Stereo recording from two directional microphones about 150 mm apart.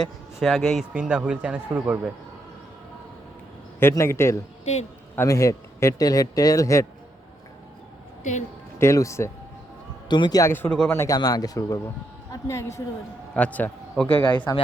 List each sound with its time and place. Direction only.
0.0 s a man's voice: centre (ahead or behind)
3.8 s a man's voice: 15° left (ahead or behind)
4.6 s a man's voice: 45° left (ahead or behind)
5.1 s speech: 20° left (ahead or behind)
8.2 s a woman's voice: 55° left (ahead or behind)
8.8 s a woman's voice: 20° left (ahead or behind)